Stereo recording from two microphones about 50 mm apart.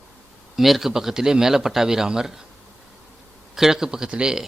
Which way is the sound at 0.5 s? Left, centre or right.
Centre.